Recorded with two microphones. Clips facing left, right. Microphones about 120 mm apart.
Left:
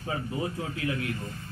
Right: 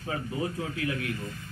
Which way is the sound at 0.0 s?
20° left (ahead or behind).